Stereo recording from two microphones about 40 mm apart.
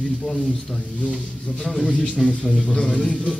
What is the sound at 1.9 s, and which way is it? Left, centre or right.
A man's voice, centre.